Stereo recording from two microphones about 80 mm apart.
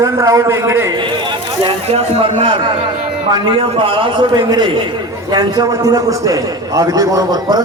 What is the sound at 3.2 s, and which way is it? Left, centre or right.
Speech, right.